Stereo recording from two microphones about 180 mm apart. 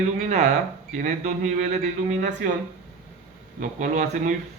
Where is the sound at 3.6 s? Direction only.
45° right (ahead or behind).